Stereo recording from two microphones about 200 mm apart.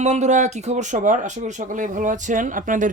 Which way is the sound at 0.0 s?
35° right (ahead or behind).